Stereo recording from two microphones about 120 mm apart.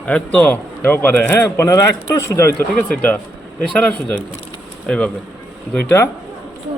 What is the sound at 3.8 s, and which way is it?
Speech, 10° left (ahead or behind).